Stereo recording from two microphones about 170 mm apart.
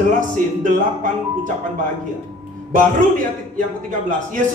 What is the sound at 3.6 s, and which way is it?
Speech, 50° right (ahead or behind).